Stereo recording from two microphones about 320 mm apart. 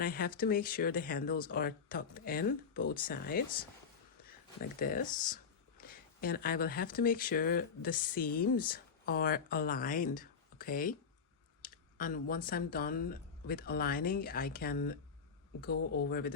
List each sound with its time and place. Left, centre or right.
0.0 s speech: left
4.8 s speech: left